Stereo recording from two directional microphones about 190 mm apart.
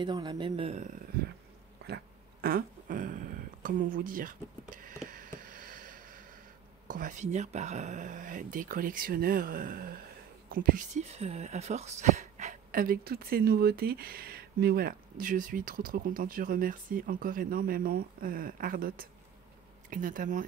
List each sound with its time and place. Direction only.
0.0 s speech: 25° right (ahead or behind)
2.4 s speech: 50° right (ahead or behind)
5.0 s a sound: 45° right (ahead or behind)
6.9 s speech: 40° right (ahead or behind)